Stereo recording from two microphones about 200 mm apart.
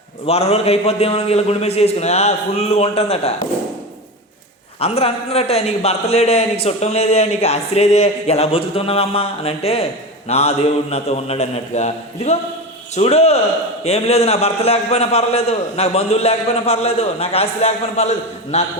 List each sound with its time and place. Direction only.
0.3 s a man's voice: 30° left (ahead or behind)
4.8 s a man's voice: 30° left (ahead or behind)